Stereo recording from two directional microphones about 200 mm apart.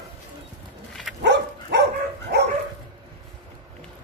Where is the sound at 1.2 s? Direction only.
60° right (ahead or behind).